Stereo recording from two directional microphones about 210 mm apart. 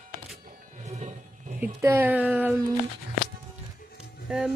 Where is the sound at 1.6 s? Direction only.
10° right (ahead or behind).